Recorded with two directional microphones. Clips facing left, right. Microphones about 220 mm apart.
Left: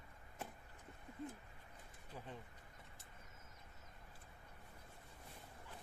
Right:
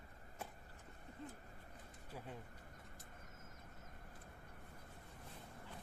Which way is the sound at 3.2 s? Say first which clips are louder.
Right 4 dB; 50° right (ahead or behind).